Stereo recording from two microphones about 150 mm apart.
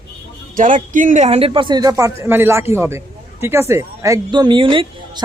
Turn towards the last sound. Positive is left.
turn(degrees=-35)  # may be behind; listen again after turning